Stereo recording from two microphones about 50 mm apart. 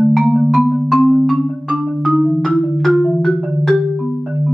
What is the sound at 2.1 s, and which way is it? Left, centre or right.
Marimba, centre.